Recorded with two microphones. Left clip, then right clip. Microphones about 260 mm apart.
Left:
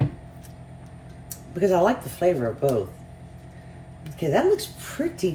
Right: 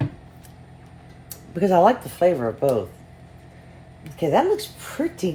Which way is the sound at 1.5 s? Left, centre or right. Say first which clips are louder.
Right 4 dB; right.